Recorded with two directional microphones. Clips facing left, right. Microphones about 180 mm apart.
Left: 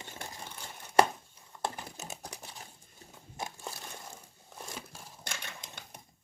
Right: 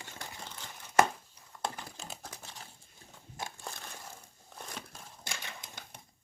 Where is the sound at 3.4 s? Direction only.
5° left (ahead or behind).